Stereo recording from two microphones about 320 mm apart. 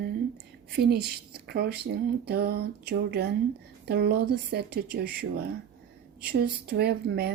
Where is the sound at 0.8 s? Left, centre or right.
Right.